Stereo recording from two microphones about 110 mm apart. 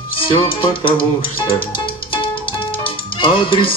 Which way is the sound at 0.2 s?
50° left (ahead or behind).